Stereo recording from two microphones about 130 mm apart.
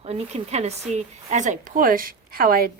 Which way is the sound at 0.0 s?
50° right (ahead or behind).